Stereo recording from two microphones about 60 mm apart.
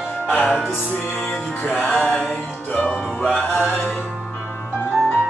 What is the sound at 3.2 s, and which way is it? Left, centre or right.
Music, centre.